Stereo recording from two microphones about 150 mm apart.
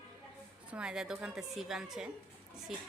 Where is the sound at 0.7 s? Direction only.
5° right (ahead or behind).